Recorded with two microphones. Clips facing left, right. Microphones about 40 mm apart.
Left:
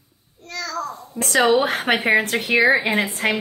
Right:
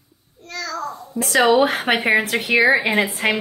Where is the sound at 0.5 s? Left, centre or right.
Centre.